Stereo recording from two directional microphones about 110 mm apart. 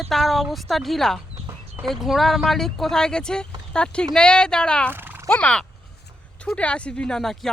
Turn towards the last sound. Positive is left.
turn(degrees=5)  # may be behind; listen again after turning